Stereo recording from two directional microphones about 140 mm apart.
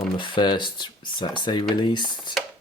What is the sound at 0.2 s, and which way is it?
Speech, 35° left (ahead or behind).